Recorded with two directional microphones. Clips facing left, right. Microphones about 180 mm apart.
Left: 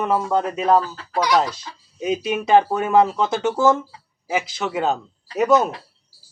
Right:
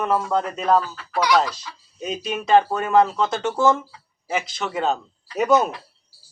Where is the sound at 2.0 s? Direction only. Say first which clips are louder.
Left 5 dB; 10° left (ahead or behind).